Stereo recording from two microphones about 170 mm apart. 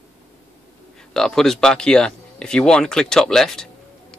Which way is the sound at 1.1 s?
5° left (ahead or behind).